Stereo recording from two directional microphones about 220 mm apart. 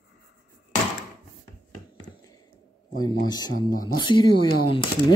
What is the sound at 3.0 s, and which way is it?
Speech, 20° left (ahead or behind).